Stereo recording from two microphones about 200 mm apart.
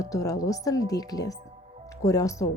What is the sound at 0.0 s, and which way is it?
Speech, 15° left (ahead or behind).